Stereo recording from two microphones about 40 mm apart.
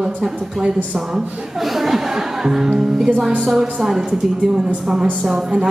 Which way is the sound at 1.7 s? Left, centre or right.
Centre.